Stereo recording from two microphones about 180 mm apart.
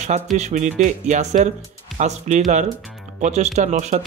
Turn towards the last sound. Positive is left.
turn(degrees=-40)  # may be behind; listen again after turning